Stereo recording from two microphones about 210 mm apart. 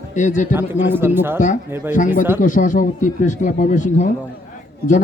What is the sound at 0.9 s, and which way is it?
A man's voice, 10° right (ahead or behind).